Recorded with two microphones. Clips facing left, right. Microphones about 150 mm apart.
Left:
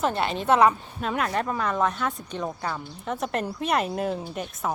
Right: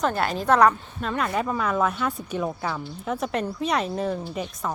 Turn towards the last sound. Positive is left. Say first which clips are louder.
# right 1 dB
turn(degrees=5)  # may be behind; listen again after turning